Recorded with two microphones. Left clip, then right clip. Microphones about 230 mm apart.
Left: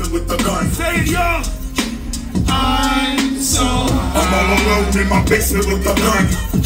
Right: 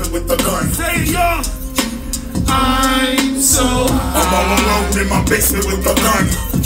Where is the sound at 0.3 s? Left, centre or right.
Right.